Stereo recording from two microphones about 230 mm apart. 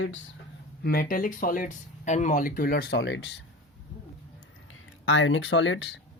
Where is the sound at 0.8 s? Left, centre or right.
Left.